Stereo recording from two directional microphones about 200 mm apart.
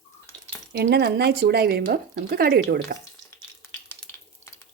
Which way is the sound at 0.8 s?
55° right (ahead or behind).